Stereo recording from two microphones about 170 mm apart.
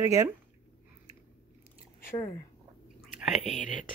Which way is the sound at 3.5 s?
50° left (ahead or behind).